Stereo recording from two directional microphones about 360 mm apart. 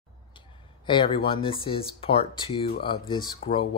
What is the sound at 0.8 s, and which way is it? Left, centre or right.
Speech, centre.